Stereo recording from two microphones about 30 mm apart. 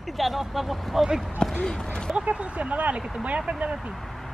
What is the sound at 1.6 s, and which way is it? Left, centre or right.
Speech, left.